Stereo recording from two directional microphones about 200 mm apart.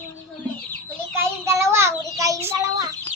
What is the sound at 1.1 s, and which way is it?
Child singing, 15° right (ahead or behind).